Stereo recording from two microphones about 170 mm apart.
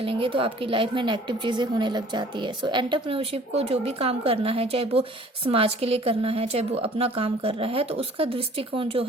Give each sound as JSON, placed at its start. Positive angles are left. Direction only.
{"t": 0.0, "sound": "a woman's voice", "side_deg": -30}